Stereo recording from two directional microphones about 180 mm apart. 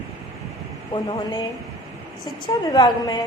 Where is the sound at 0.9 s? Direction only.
30° left (ahead or behind).